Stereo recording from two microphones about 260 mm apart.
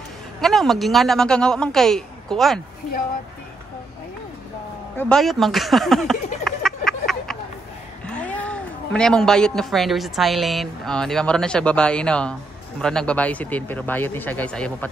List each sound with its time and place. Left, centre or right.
0.4 s speech: centre
4.9 s speech: centre
6.6 s a sound: centre
8.1 s a man's voice: centre